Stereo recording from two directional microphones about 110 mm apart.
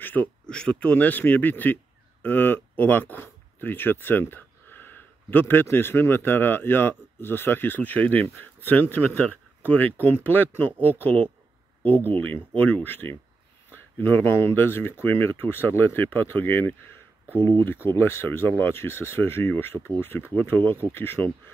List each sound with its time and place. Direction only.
0.0 s speech: 15° left (ahead or behind)
17.8 s speech: 20° left (ahead or behind)